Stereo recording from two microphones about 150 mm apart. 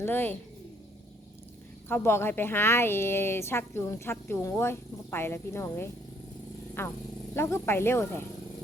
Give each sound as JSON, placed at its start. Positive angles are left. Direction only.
{"t": 0.0, "sound": "a woman's voice", "side_deg": 15}
{"t": 1.9, "sound": "a woman's voice", "side_deg": 15}